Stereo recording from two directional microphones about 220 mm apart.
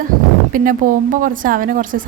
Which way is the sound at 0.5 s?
40° right (ahead or behind).